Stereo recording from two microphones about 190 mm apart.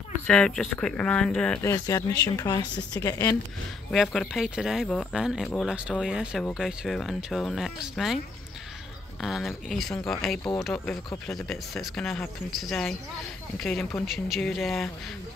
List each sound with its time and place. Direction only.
0.3 s speech: 5° left (ahead or behind)
1.6 s speech: 15° left (ahead or behind)
3.9 s speech: centre (ahead or behind)
9.2 s speech: centre (ahead or behind)